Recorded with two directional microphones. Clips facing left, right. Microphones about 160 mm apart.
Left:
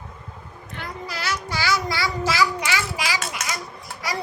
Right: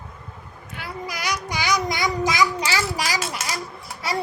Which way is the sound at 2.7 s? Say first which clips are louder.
Right 1 dB; 40° right (ahead or behind).